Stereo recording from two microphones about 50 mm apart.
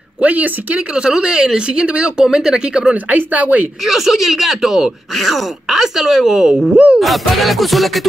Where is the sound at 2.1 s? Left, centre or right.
Centre.